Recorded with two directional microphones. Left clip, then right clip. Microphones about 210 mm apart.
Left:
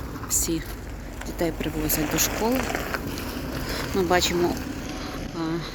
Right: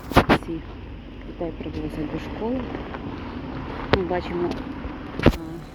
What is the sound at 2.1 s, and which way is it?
Speech, 20° left (ahead or behind).